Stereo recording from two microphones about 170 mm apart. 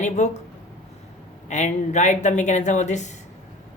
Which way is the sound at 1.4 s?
45° left (ahead or behind).